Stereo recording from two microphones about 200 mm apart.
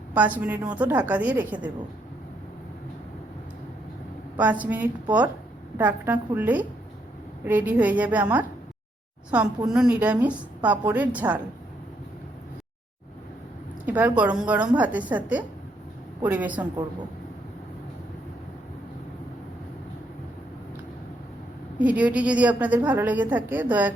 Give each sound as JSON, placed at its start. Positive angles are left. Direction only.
{"t": 0.1, "sound": "a woman's voice", "side_deg": -10}
{"t": 4.4, "sound": "a woman's voice", "side_deg": -5}
{"t": 9.6, "sound": "a woman's voice", "side_deg": -5}
{"t": 13.8, "sound": "a woman's voice", "side_deg": -10}
{"t": 21.8, "sound": "a woman's voice", "side_deg": -5}